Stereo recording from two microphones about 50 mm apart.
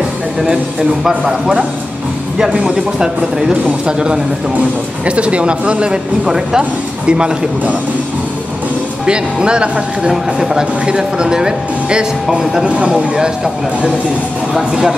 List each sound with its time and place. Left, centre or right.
0.5 s speech: centre
2.6 s speech: centre
9.0 s speech: centre
12.6 s speech: right
14.5 s speech: centre